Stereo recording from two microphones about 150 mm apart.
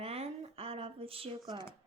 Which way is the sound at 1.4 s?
30° right (ahead or behind).